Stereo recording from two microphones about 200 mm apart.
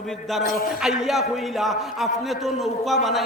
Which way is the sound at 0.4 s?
50° left (ahead or behind).